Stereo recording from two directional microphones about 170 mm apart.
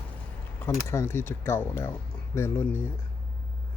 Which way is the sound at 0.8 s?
15° left (ahead or behind).